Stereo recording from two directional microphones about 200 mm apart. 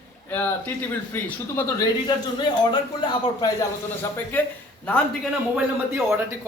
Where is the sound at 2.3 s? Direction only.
20° left (ahead or behind).